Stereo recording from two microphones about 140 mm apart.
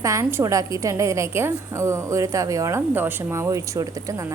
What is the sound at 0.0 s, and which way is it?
A woman's voice, 20° right (ahead or behind).